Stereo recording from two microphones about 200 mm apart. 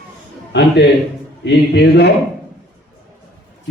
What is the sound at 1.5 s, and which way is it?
Speech, 60° left (ahead or behind).